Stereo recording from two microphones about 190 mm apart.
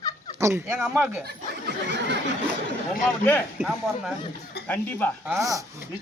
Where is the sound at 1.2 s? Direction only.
60° right (ahead or behind).